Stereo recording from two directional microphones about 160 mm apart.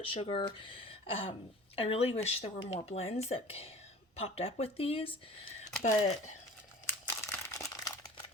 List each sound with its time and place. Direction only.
0.0 s speech: 35° left (ahead or behind)
6.8 s crumpling: 15° left (ahead or behind)